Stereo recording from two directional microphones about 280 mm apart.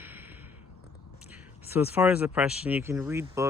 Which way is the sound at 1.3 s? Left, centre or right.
Centre.